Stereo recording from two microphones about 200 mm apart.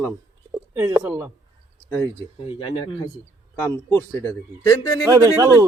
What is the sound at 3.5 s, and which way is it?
A man's voice, 10° left (ahead or behind).